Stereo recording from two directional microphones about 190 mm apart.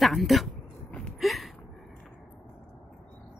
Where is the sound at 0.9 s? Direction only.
Centre (ahead or behind).